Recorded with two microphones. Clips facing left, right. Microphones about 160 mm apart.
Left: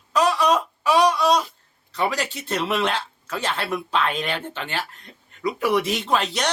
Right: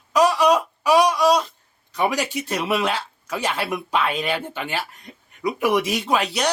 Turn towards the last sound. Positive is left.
turn(degrees=-10)  # may be behind; listen again after turning